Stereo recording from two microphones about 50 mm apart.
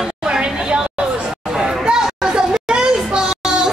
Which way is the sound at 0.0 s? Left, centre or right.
Centre.